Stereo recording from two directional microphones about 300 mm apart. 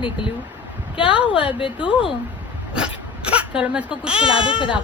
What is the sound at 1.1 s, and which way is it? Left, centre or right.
Speech, centre.